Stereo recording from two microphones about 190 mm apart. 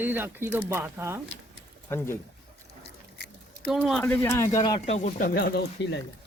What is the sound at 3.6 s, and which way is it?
Speech, centre (ahead or behind).